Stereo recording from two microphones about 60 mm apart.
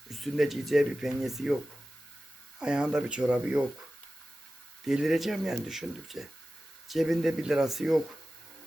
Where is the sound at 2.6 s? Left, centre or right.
Centre.